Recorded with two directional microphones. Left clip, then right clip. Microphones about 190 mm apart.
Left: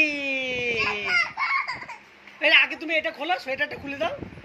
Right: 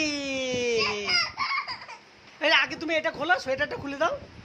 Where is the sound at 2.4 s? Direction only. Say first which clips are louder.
Left 4 dB; 20° right (ahead or behind).